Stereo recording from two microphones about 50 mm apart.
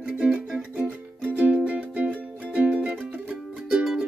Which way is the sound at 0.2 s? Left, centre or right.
Right.